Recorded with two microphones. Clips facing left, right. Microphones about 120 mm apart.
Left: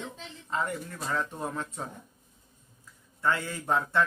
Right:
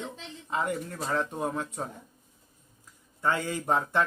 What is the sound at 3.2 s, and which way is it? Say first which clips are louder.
Speech: right 1 dB; 20° right (ahead or behind).